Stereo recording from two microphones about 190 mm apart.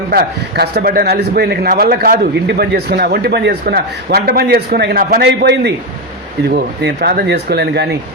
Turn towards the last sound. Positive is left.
turn(degrees=-60)  # may be behind; listen again after turning